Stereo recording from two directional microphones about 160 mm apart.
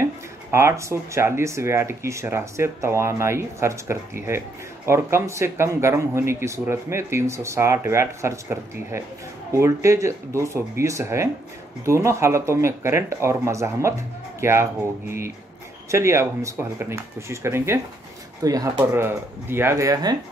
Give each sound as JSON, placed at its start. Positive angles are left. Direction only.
{"t": 0.0, "sound": "speech", "side_deg": -15}